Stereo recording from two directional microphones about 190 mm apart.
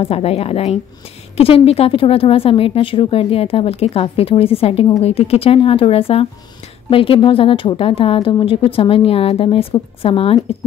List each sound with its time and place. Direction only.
0.0 s a woman's voice: 30° left (ahead or behind)